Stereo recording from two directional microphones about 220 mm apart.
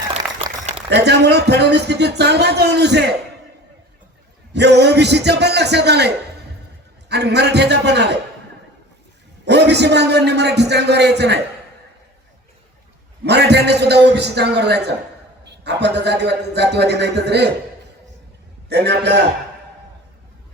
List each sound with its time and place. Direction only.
0.1 s a sound: 30° right (ahead or behind)
0.9 s a man's voice: 50° right (ahead or behind)
4.5 s a man's voice: 50° right (ahead or behind)
7.1 s a man's voice: 50° right (ahead or behind)
9.5 s a man's voice: 50° right (ahead or behind)
13.2 s a man's voice: 50° right (ahead or behind)
18.7 s a man's voice: 50° right (ahead or behind)